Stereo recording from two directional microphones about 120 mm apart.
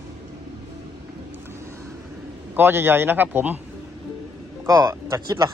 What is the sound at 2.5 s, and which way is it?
A man's voice, 20° right (ahead or behind).